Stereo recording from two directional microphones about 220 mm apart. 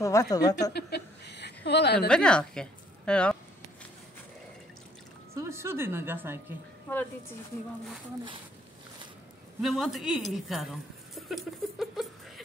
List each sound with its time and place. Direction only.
0.0 s a woman's voice: 15° left (ahead or behind)
0.7 s chuckle: 45° left (ahead or behind)
2.0 s a woman's voice: 5° left (ahead or behind)
5.3 s a woman's voice: 10° right (ahead or behind)
9.6 s a woman's voice: centre (ahead or behind)